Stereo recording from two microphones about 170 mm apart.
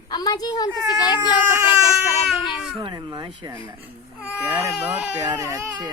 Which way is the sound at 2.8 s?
25° right (ahead or behind).